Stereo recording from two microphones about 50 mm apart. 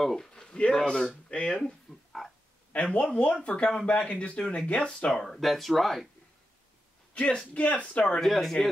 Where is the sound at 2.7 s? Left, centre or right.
Left.